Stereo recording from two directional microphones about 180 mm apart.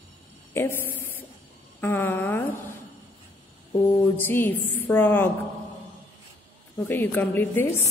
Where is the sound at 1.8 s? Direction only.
10° left (ahead or behind).